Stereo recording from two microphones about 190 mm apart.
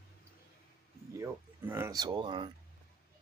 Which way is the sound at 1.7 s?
15° right (ahead or behind).